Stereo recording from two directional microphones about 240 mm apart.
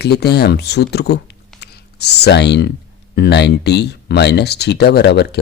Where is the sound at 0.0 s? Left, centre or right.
Left.